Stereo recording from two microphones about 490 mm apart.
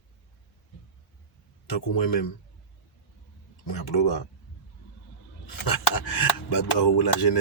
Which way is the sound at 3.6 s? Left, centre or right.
Left.